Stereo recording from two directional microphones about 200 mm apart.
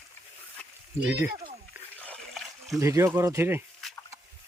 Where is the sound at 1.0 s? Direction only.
10° right (ahead or behind).